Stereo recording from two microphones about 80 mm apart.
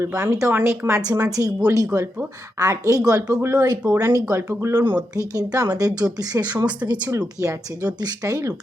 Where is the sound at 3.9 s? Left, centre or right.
Right.